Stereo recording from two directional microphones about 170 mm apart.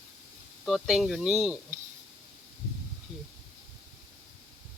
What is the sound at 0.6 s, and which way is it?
Speech, centre (ahead or behind).